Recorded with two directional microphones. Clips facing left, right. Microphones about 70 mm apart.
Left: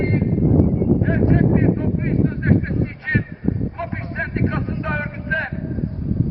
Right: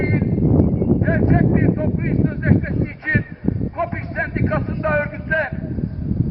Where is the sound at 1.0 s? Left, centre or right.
Right.